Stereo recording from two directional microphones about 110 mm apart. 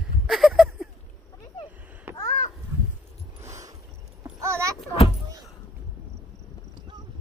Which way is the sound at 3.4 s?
30° right (ahead or behind).